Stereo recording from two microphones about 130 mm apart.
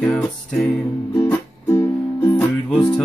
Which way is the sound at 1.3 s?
20° left (ahead or behind).